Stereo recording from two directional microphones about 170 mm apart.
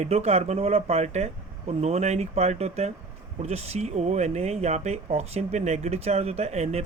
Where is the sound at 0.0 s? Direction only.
40° right (ahead or behind).